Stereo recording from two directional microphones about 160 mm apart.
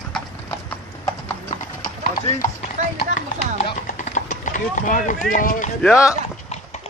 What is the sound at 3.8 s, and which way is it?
Clip-clop, 50° left (ahead or behind).